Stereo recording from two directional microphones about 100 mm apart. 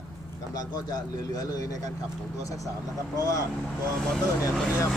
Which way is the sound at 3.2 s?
35° left (ahead or behind).